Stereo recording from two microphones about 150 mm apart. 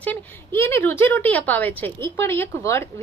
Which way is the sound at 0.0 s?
15° left (ahead or behind).